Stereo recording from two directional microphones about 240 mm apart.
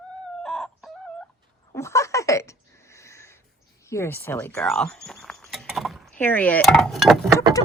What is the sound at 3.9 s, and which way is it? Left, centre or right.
Speech, centre.